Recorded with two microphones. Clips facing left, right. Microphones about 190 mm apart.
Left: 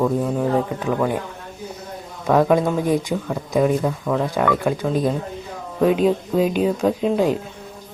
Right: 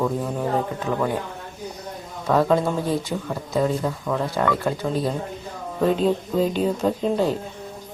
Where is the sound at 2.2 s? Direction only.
15° left (ahead or behind).